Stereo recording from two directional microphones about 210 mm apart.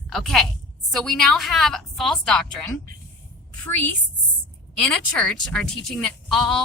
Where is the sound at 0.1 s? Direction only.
Centre (ahead or behind).